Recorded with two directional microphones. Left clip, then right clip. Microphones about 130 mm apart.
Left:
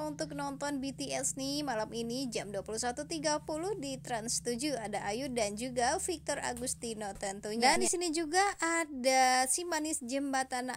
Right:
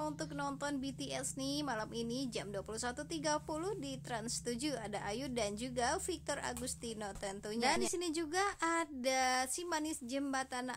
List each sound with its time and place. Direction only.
0.0 s speech: 25° left (ahead or behind)
7.5 s a woman's voice: 35° left (ahead or behind)